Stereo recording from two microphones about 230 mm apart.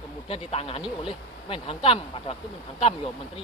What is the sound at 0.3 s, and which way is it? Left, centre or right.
Speech, left.